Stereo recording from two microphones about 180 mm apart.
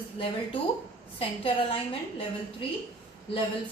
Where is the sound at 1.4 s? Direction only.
30° left (ahead or behind).